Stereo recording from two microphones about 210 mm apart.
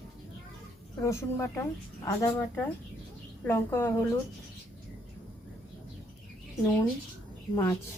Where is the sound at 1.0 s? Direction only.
15° left (ahead or behind).